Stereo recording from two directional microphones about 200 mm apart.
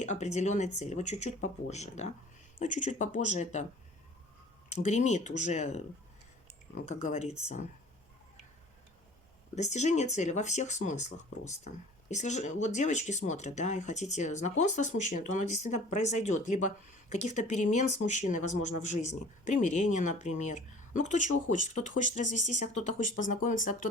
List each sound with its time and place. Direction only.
0.0 s speech: 35° left (ahead or behind)
4.7 s speech: 35° left (ahead or behind)
9.6 s speech: 35° left (ahead or behind)